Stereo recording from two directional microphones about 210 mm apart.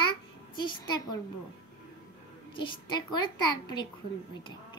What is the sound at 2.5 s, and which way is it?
A child's voice, 20° left (ahead or behind).